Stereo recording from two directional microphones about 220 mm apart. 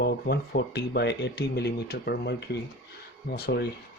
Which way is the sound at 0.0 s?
45° left (ahead or behind).